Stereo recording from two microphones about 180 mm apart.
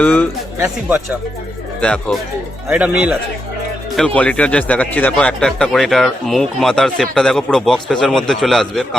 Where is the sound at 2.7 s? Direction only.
5° right (ahead or behind).